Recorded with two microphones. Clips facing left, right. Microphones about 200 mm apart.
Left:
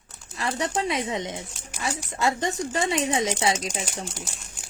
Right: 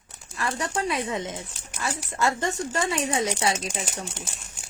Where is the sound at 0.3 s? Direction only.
25° left (ahead or behind).